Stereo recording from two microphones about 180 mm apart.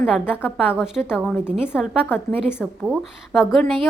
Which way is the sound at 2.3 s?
10° left (ahead or behind).